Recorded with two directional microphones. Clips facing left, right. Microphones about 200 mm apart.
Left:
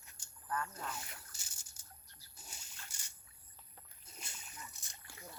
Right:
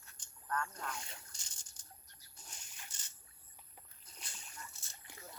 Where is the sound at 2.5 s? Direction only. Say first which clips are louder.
Right 1 dB; 10° left (ahead or behind).